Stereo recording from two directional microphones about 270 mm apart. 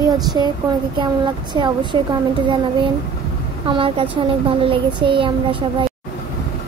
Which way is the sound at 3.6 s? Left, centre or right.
Centre.